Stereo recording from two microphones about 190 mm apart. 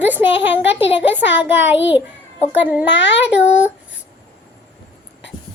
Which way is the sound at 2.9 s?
70° left (ahead or behind).